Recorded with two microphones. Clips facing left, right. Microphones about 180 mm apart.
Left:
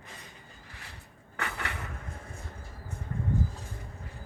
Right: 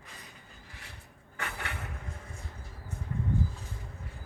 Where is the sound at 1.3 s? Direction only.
70° left (ahead or behind).